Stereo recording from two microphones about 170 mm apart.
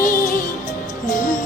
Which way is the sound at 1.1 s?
50° left (ahead or behind).